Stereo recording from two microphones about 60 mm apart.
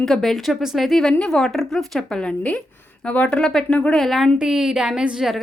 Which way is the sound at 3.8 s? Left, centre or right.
Left.